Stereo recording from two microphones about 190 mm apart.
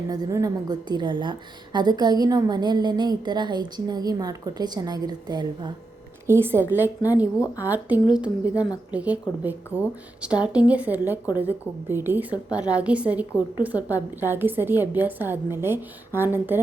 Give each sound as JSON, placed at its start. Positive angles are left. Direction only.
{"t": 0.1, "sound": "a woman's voice", "side_deg": -20}
{"t": 7.4, "sound": "a woman's voice", "side_deg": 15}
{"t": 7.7, "sound": "a woman's voice", "side_deg": -10}